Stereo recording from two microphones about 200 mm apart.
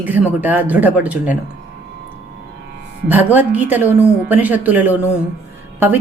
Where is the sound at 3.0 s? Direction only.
10° right (ahead or behind).